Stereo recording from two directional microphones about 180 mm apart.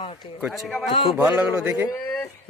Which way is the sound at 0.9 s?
30° left (ahead or behind).